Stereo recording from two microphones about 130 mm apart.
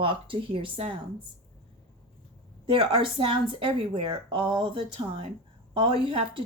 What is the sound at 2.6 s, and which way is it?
Speech, 40° right (ahead or behind).